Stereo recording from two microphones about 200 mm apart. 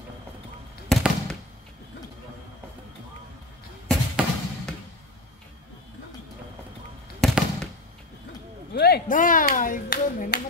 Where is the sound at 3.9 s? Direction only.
Centre (ahead or behind).